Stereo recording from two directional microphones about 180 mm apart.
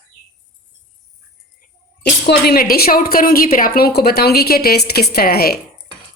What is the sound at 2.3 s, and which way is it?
A woman's voice, 60° left (ahead or behind).